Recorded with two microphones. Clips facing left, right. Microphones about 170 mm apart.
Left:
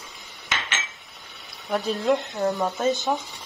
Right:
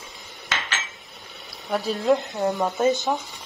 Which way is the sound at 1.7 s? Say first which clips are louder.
Right 1 dB; centre (ahead or behind).